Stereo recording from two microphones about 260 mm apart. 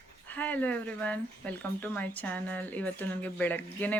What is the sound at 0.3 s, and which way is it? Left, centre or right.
Speech, centre.